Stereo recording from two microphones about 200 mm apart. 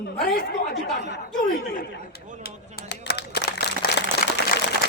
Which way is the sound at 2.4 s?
50° left (ahead or behind).